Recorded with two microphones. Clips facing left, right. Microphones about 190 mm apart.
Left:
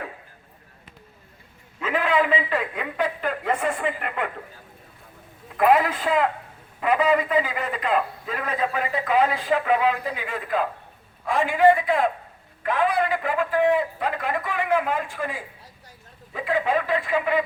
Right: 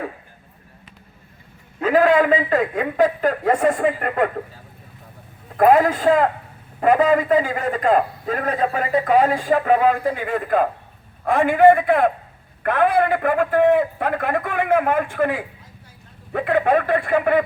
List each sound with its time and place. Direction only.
1.8 s a man's voice: 40° right (ahead or behind)
5.5 s a man's voice: 45° right (ahead or behind)